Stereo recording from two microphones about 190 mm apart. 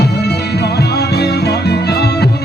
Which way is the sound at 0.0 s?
60° left (ahead or behind).